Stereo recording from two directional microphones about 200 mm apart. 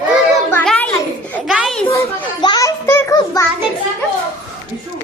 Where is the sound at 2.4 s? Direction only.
20° left (ahead or behind).